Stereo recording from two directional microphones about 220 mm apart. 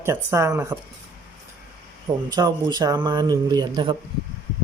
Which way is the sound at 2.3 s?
20° right (ahead or behind).